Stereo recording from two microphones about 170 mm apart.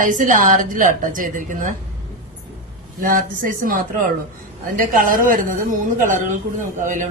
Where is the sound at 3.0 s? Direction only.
55° right (ahead or behind).